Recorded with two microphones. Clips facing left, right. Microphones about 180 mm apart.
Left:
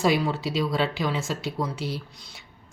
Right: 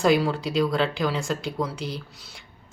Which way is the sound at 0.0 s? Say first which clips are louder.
Right 2 dB; centre (ahead or behind).